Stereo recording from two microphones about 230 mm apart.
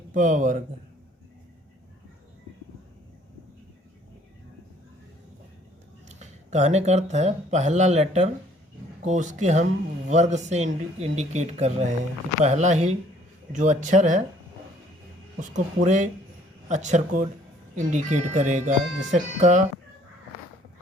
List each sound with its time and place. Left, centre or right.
0.1 s speech: right
6.1 s speech: right
15.4 s speech: right